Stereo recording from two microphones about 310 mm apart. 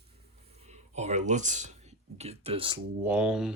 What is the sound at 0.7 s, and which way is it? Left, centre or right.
Speech, right.